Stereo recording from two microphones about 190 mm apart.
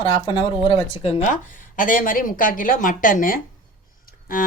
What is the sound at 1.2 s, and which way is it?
Speech, 45° left (ahead or behind).